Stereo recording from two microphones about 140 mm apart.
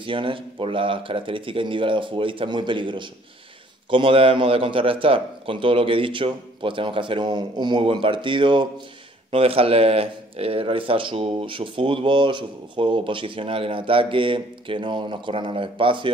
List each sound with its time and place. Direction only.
0.0 s speech: 40° right (ahead or behind)